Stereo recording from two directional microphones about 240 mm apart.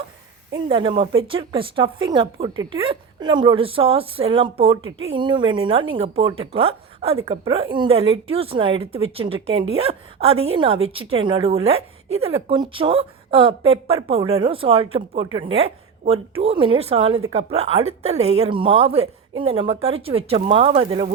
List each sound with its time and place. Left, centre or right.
0.5 s a woman's voice: centre